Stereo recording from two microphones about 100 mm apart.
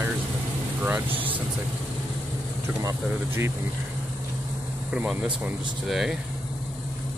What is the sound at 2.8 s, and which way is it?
Speech, 30° right (ahead or behind).